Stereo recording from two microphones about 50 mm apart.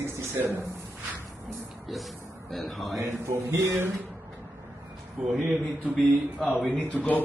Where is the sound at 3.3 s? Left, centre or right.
Right.